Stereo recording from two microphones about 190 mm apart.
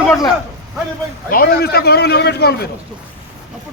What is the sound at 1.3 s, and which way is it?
A man's voice, 55° left (ahead or behind).